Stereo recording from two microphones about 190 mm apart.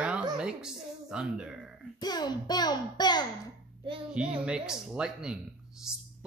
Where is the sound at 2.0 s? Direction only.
20° left (ahead or behind).